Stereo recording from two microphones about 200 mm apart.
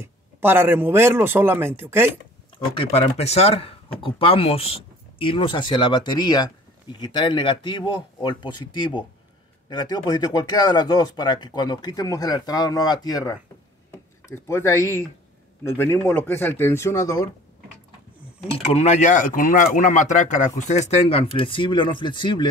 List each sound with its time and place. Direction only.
0.0 s a man's voice: 10° right (ahead or behind)
2.7 s speech: 30° left (ahead or behind)
18.7 s speech: 30° left (ahead or behind)